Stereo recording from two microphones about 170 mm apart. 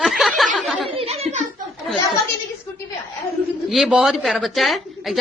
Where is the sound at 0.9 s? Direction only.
35° right (ahead or behind).